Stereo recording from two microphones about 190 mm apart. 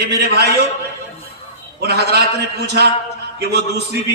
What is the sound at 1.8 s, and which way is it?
A man's voice, 60° right (ahead or behind).